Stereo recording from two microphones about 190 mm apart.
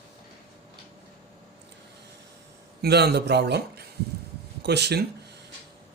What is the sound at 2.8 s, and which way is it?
Speech, 60° right (ahead or behind).